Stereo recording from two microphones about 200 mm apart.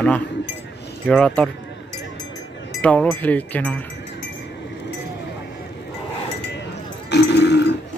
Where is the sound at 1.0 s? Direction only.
5° left (ahead or behind).